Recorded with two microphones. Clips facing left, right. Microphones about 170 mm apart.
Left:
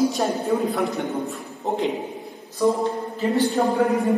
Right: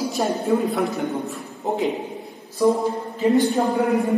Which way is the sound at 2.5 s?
20° right (ahead or behind).